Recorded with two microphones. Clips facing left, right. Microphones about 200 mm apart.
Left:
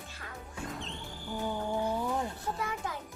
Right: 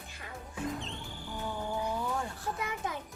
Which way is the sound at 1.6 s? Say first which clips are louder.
Left 1 dB; 30° left (ahead or behind).